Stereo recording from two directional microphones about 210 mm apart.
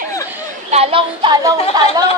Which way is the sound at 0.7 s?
30° right (ahead or behind).